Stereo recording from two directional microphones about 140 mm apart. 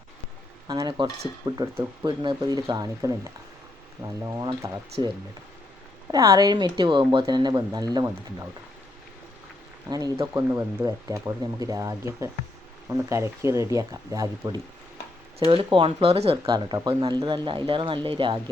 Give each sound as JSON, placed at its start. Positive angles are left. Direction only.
{"t": 0.7, "sound": "speech", "side_deg": -30}
{"t": 6.1, "sound": "speech", "side_deg": -25}
{"t": 9.9, "sound": "speech", "side_deg": -25}
{"t": 15.4, "sound": "speech", "side_deg": -40}
{"t": 16.5, "sound": "speech", "side_deg": -30}